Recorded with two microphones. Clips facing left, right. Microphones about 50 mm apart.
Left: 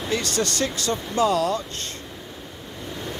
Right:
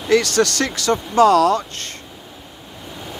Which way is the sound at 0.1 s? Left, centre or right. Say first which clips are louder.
Right 9 dB; right.